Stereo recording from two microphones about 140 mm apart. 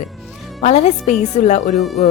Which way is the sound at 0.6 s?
50° left (ahead or behind).